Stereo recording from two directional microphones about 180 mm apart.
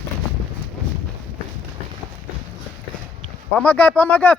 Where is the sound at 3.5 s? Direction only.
10° left (ahead or behind).